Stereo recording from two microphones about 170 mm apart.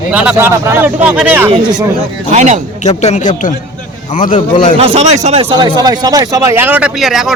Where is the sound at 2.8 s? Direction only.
40° left (ahead or behind).